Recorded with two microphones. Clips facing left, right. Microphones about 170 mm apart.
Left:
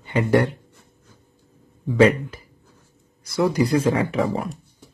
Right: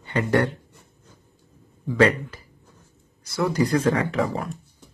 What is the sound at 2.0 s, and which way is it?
Speech, 15° left (ahead or behind).